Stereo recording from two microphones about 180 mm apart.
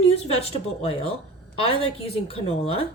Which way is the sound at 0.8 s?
35° left (ahead or behind).